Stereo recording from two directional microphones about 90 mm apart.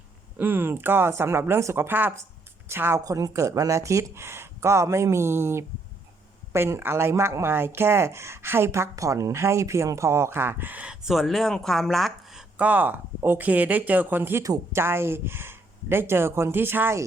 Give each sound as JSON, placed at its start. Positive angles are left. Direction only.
{"t": 0.3, "sound": "a woman's voice", "side_deg": -20}
{"t": 3.0, "sound": "speech", "side_deg": -40}
{"t": 11.0, "sound": "speech", "side_deg": 0}
{"t": 12.5, "sound": "speech", "side_deg": -20}
{"t": 14.4, "sound": "speech", "side_deg": -35}